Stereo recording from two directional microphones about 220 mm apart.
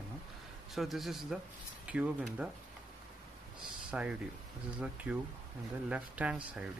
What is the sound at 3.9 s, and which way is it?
Speech, 5° right (ahead or behind).